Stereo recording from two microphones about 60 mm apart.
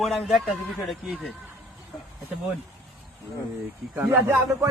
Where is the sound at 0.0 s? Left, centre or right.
Centre.